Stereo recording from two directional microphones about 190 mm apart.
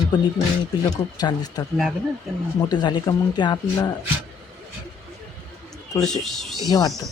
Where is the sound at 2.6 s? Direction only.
20° left (ahead or behind).